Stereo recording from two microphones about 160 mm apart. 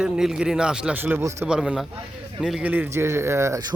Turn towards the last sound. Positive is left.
turn(degrees=-15)  # may be behind; listen again after turning